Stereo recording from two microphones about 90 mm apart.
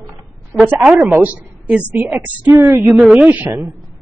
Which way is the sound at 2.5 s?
30° right (ahead or behind).